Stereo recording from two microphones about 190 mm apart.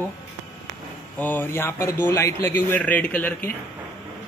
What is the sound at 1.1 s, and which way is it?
Speech, 10° left (ahead or behind).